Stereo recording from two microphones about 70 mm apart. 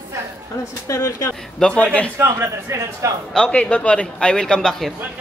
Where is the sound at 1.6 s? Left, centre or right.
Centre.